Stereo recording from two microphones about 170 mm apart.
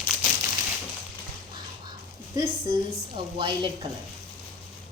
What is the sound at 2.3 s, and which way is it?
A woman's voice, 30° right (ahead or behind).